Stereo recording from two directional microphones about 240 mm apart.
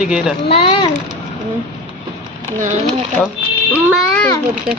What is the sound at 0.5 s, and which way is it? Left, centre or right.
Speech, left.